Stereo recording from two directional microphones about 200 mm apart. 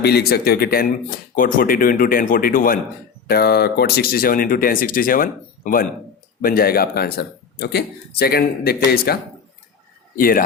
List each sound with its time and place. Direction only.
0.0 s speech: 55° left (ahead or behind)
10.2 s speech: 45° left (ahead or behind)